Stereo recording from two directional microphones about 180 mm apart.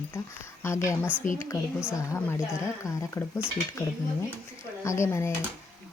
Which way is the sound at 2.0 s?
15° left (ahead or behind).